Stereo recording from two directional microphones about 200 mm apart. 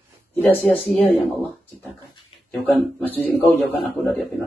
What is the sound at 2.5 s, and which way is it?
Speech, centre (ahead or behind).